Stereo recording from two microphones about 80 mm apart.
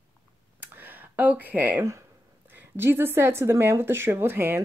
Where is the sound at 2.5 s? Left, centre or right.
Right.